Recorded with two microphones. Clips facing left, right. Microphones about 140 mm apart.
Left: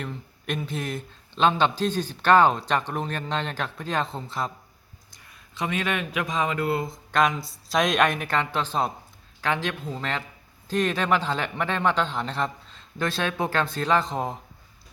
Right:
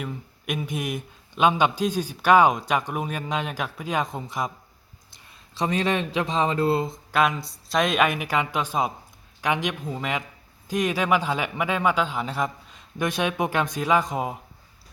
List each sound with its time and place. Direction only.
0.0 s speech: 10° right (ahead or behind)
5.2 s speech: 30° right (ahead or behind)
7.1 s speech: 5° right (ahead or behind)